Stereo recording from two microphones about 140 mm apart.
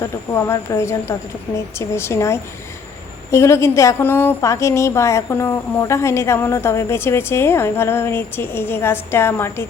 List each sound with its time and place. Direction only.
0.0 s a woman's voice: 20° left (ahead or behind)